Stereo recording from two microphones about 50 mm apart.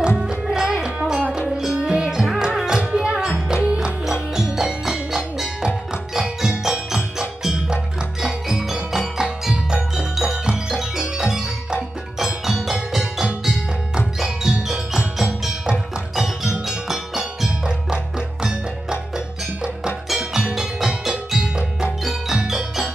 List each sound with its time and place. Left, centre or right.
0.2 s music: centre